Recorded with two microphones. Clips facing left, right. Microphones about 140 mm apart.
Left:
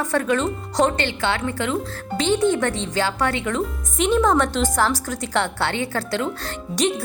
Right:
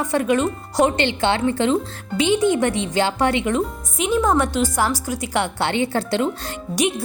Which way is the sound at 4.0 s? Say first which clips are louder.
Left 1 dB; 5° right (ahead or behind).